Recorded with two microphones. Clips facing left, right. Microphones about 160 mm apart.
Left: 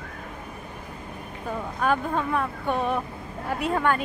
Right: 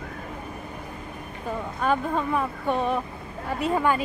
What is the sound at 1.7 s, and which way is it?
Speech, centre (ahead or behind).